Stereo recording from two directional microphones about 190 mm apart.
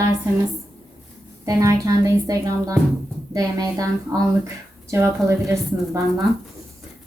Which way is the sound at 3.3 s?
20° right (ahead or behind).